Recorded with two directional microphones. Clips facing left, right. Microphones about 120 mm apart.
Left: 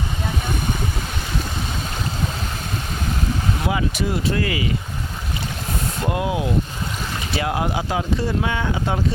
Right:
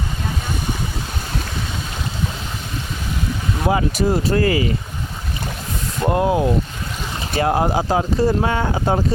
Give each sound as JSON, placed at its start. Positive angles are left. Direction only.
{"t": 3.7, "sound": "speech", "side_deg": -40}
{"t": 6.1, "sound": "speech", "side_deg": -40}